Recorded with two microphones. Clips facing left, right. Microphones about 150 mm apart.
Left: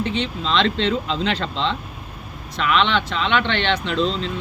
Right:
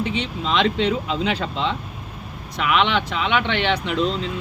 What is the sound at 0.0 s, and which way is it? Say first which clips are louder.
Speech: left 1 dB; 10° right (ahead or behind).